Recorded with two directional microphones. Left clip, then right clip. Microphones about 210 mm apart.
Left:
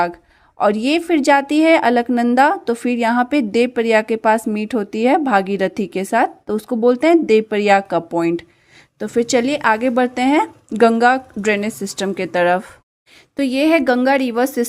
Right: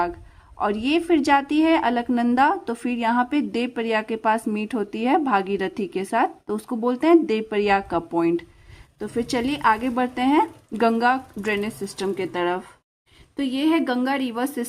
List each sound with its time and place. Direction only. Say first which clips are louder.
0.6 s a woman's voice: left 6 dB; 25° left (ahead or behind)